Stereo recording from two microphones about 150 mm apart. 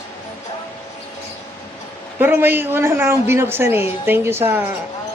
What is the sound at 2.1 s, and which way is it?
A woman's voice, 15° right (ahead or behind).